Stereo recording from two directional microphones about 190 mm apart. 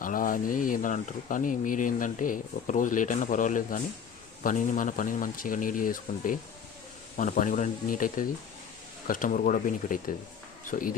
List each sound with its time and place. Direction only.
0.0 s speech: 45° left (ahead or behind)